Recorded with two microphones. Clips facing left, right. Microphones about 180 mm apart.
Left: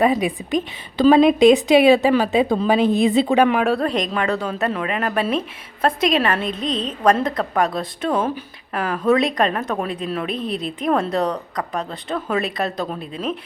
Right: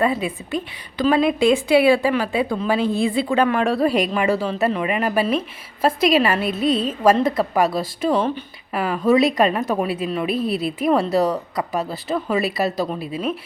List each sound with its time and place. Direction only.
0.0 s a woman's voice: 15° left (ahead or behind)
3.6 s a woman's voice: centre (ahead or behind)